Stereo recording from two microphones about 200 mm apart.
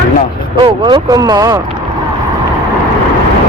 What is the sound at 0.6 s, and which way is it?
Speech, 20° right (ahead or behind).